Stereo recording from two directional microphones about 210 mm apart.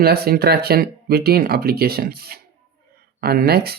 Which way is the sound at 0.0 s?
45° right (ahead or behind).